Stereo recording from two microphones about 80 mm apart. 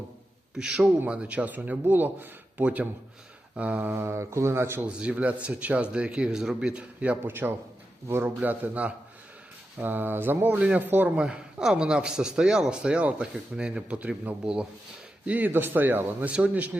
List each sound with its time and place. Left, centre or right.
0.5 s a man's voice: centre
3.9 s speech: right
4.9 s speech: centre; by 8.3 s right
8.4 s a man's voice: centre
11.2 s a man's voice: centre